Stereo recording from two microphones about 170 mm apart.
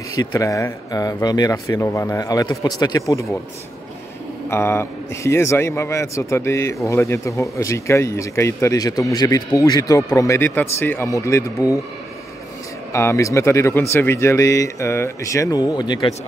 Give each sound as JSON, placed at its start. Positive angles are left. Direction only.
{"t": 0.2, "sound": "speech", "side_deg": 20}
{"t": 4.5, "sound": "a man's voice", "side_deg": 15}
{"t": 12.9, "sound": "a man's voice", "side_deg": 15}